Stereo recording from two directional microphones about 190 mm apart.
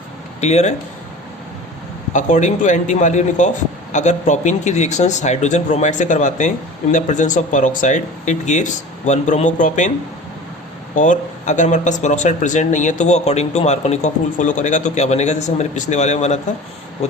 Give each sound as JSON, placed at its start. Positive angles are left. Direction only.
{"t": 0.4, "sound": "speech", "side_deg": 35}
{"t": 2.1, "sound": "speech", "side_deg": 40}
{"t": 10.9, "sound": "speech", "side_deg": 40}